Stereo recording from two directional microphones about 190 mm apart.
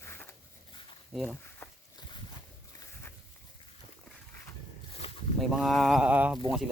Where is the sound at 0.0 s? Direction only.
10° left (ahead or behind).